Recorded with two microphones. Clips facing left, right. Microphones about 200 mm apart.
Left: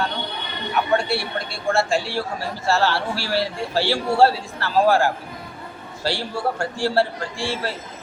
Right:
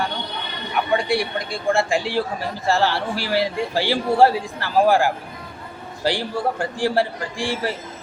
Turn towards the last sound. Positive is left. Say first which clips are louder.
# right 2 dB
turn(degrees=-15)  # may be behind; listen again after turning